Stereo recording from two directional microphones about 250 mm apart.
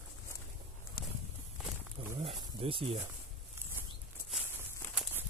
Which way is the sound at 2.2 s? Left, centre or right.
Right.